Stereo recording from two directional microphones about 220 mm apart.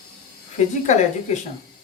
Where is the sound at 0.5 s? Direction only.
30° left (ahead or behind).